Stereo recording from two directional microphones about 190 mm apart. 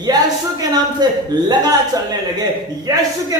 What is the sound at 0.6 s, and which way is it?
A man's voice, 20° right (ahead or behind).